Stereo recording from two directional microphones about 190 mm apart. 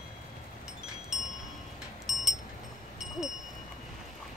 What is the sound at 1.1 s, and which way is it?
Wind chime, centre (ahead or behind).